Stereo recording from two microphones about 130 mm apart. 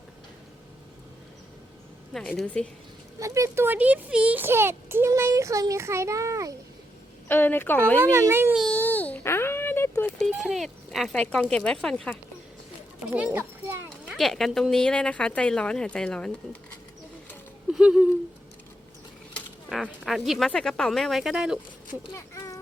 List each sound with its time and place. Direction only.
2.1 s speech: 5° left (ahead or behind)
3.2 s a child's voice: 25° right (ahead or behind)
7.3 s speech: 15° left (ahead or behind)
8.1 s a child's voice: 20° right (ahead or behind)
8.7 s a sound: 10° left (ahead or behind)
10.2 s a sound: centre (ahead or behind)
10.4 s speech: centre (ahead or behind)
13.1 s a child's voice: 10° right (ahead or behind)
14.1 s speech: centre (ahead or behind)
17.7 s a sound: 5° right (ahead or behind)
19.7 s speech: centre (ahead or behind)
22.1 s a sound: 25° left (ahead or behind)